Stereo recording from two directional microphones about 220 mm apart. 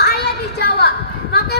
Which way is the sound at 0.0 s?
45° left (ahead or behind).